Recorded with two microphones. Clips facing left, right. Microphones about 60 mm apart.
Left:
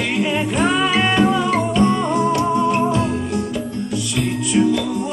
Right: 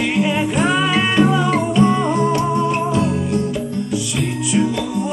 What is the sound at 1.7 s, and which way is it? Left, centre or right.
Music, centre.